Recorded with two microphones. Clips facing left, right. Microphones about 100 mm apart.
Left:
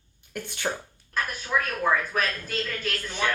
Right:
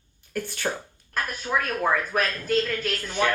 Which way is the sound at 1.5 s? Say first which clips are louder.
Even; 25° right (ahead or behind).